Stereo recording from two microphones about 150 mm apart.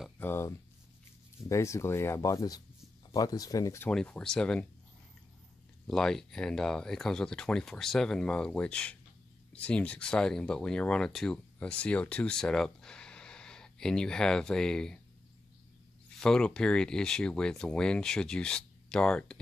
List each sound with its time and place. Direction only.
0.2 s speech: 15° left (ahead or behind)
3.9 s speech: 5° left (ahead or behind)
5.9 s speech: 5° left (ahead or behind)
16.2 s speech: 5° left (ahead or behind)